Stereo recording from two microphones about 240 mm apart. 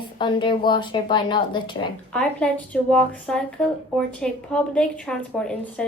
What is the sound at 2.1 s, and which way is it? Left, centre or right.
Speech, centre.